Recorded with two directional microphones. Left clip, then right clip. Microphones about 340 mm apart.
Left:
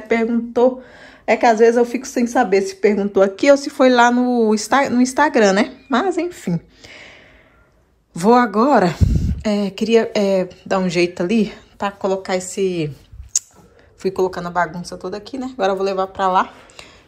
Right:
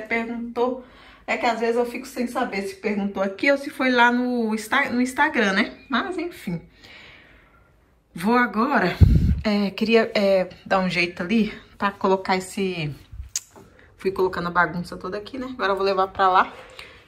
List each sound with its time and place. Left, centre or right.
0.1 s a woman's voice: left
8.1 s speech: centre